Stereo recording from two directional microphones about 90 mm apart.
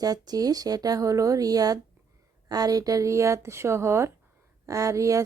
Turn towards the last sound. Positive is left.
turn(degrees=-35)  # may be behind; listen again after turning